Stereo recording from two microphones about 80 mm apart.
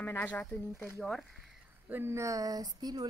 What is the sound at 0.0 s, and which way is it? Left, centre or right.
Speech, left.